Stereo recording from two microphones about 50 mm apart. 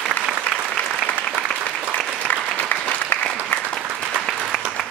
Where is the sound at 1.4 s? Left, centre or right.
Left.